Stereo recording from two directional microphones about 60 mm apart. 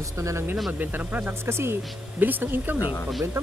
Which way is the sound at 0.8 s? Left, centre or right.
Right.